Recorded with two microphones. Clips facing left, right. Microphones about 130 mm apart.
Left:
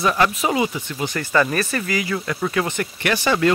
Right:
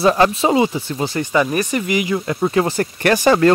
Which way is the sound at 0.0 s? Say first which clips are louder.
Right 5 dB; 30° right (ahead or behind).